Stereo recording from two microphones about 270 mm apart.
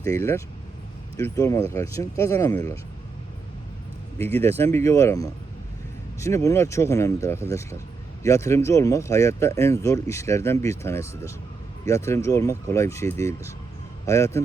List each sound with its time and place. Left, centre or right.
0.1 s speech: centre
4.2 s speech: right
4.4 s speech: centre